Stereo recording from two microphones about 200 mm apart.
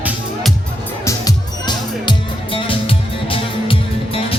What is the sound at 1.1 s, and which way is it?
Music, 20° left (ahead or behind).